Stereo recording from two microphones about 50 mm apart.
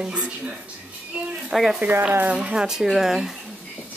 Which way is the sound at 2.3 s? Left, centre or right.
Centre.